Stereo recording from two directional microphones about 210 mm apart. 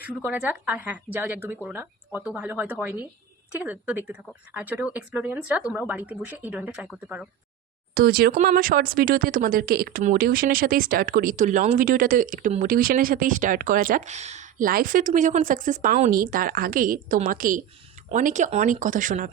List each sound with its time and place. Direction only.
0.0 s speech: 5° right (ahead or behind)
7.9 s speech: 45° right (ahead or behind)